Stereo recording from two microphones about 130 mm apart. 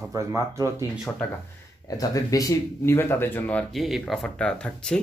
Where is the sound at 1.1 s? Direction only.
15° left (ahead or behind).